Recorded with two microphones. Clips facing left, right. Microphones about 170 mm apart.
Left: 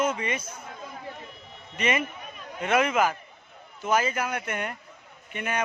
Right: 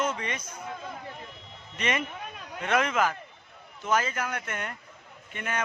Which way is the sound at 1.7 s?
5° left (ahead or behind).